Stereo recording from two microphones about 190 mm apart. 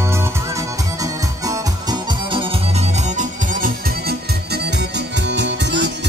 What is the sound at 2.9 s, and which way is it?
Music, 40° right (ahead or behind).